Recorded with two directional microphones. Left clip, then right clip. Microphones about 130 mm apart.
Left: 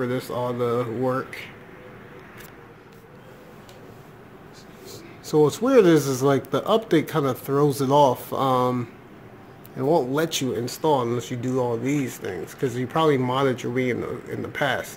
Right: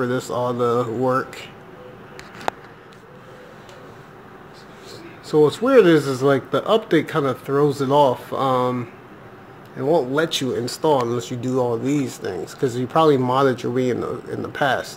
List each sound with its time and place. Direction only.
0.0 s speech: 5° right (ahead or behind)
5.3 s speech: 15° left (ahead or behind)
9.9 s speech: 15° left (ahead or behind)
10.5 s speech: centre (ahead or behind)